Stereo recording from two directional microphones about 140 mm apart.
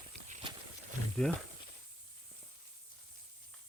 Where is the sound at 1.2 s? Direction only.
5° left (ahead or behind).